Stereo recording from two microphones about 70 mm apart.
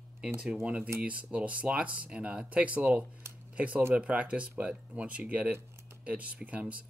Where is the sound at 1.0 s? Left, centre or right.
Centre.